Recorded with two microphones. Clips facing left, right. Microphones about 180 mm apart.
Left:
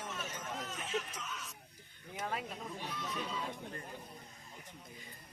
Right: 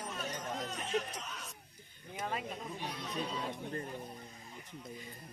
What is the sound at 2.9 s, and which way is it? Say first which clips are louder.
Speech: right 2 dB; 35° right (ahead or behind).